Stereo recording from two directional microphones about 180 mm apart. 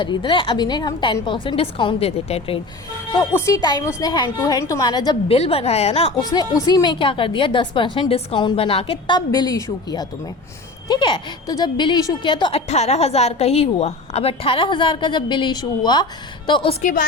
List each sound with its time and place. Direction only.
0.0 s a woman's voice: 25° left (ahead or behind)
3.3 s a woman's voice: 15° left (ahead or behind)
5.4 s a woman's voice: 35° left (ahead or behind)
6.1 s a woman's voice: 20° left (ahead or behind)
16.8 s a woman's voice: 50° left (ahead or behind)